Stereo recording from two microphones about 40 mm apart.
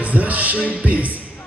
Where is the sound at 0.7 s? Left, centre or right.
Right.